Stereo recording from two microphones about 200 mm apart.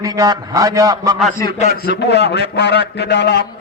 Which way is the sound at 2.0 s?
60° left (ahead or behind).